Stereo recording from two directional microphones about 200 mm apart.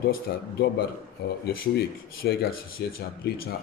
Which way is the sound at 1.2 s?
55° left (ahead or behind).